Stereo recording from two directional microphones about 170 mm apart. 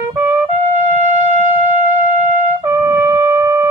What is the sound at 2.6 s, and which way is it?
Music, 15° right (ahead or behind).